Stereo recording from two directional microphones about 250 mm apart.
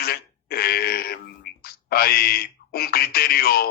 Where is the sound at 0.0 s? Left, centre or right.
Left.